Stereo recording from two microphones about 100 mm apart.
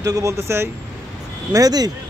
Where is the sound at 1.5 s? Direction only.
40° right (ahead or behind).